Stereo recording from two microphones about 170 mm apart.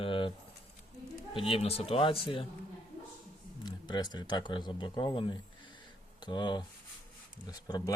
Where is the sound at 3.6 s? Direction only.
25° left (ahead or behind).